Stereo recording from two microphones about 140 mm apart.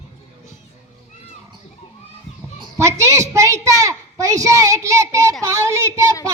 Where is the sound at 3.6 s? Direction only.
25° right (ahead or behind).